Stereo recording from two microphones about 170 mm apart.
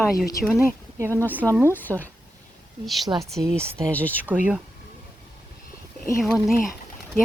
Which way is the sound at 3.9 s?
10° left (ahead or behind).